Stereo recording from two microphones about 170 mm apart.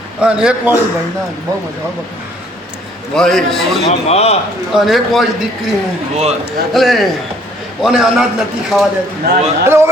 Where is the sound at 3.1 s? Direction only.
Centre (ahead or behind).